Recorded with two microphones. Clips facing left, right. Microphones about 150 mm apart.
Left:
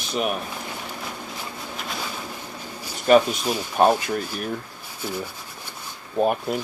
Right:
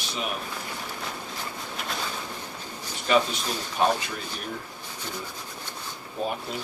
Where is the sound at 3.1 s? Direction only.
45° left (ahead or behind).